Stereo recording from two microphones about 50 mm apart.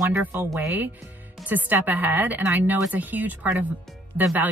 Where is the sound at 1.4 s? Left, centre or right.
Right.